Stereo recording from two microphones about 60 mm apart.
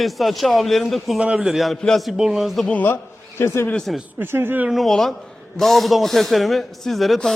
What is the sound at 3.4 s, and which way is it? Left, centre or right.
Speech, left.